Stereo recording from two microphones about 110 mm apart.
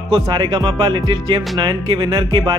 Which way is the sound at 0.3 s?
45° right (ahead or behind).